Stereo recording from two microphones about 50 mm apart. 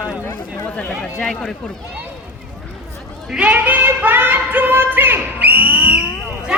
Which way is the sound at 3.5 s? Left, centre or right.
Right.